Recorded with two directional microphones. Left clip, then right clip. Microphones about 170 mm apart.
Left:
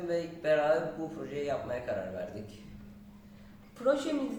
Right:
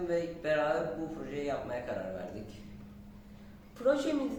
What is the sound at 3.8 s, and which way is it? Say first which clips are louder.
Speech: even; 15° right (ahead or behind).